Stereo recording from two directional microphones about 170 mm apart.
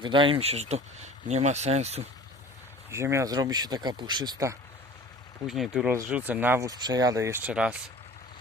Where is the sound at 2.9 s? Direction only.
15° right (ahead or behind).